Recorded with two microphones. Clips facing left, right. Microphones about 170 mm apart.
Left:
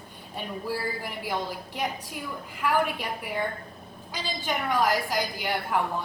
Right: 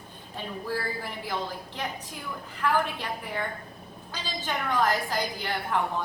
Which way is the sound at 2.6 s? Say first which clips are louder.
Left 1 dB; 10° left (ahead or behind).